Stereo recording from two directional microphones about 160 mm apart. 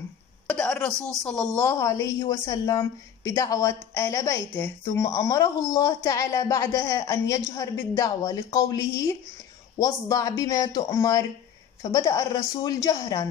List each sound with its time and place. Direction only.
0.5 s a woman's voice: 5° left (ahead or behind)